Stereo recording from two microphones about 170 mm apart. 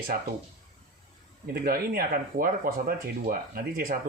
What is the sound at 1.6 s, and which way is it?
Speech, 60° right (ahead or behind).